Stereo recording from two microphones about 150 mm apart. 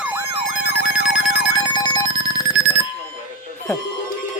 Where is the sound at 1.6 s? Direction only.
30° left (ahead or behind).